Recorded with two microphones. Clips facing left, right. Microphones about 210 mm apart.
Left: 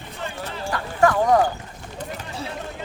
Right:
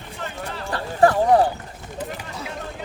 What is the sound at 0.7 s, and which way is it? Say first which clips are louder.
Clip-clop: right 2 dB; 35° right (ahead or behind).